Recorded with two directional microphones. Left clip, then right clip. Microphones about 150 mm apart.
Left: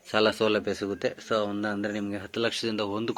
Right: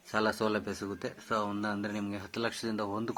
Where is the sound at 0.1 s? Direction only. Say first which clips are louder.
Left 7 dB; 15° left (ahead or behind).